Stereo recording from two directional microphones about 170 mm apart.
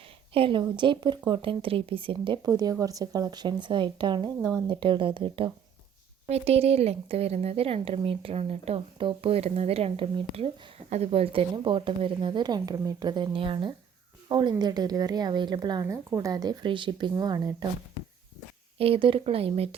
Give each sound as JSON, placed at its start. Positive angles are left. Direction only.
{"t": 0.3, "sound": "a woman's voice", "side_deg": -30}
{"t": 18.8, "sound": "a woman's voice", "side_deg": -35}